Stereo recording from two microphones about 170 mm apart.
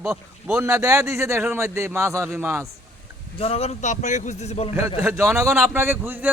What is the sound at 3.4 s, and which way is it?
A man's voice, 35° left (ahead or behind).